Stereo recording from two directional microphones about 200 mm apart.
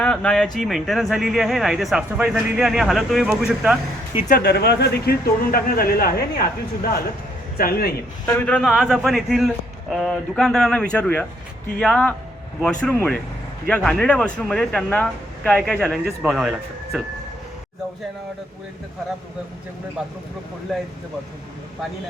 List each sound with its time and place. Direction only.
0.0 s speech: 5° left (ahead or behind)
4.3 s speech: 50° left (ahead or behind)
8.3 s speech: 10° left (ahead or behind)
20.0 s speech: 5° right (ahead or behind)